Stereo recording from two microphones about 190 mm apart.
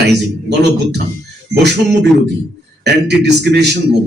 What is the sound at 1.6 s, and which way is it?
A man's voice, 65° right (ahead or behind).